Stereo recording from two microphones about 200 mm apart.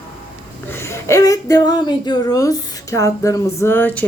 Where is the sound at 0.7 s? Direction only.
15° left (ahead or behind).